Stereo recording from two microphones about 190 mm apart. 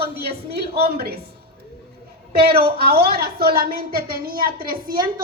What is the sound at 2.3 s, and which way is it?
A woman's voice, 55° right (ahead or behind).